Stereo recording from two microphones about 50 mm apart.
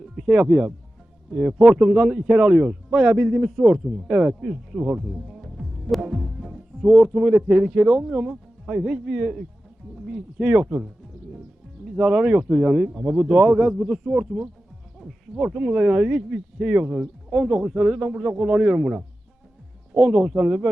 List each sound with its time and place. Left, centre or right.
0.3 s a man's voice: right
1.3 s speech: centre
1.5 s a man's voice: right
4.4 s speech: centre
4.9 s music: centre
6.8 s a man's voice: right
9.9 s music: centre
10.3 s a man's voice: right
11.9 s a man's voice: right
15.3 s speech: centre
15.7 s a man's voice: right